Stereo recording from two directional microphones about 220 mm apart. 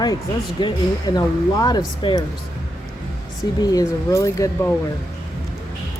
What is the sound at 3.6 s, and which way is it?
Speech, 15° left (ahead or behind).